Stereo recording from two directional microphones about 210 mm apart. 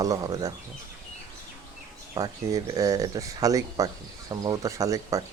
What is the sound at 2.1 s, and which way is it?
Speech, 20° right (ahead or behind).